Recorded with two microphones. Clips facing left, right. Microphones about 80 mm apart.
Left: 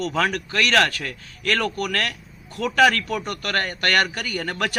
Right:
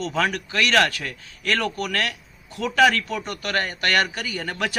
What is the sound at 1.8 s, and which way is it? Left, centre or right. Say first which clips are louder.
Speech: even; centre.